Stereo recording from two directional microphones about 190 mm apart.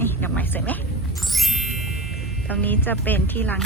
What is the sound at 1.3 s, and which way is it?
Music, centre (ahead or behind).